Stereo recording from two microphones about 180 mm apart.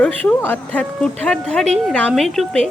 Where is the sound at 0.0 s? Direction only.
5° left (ahead or behind).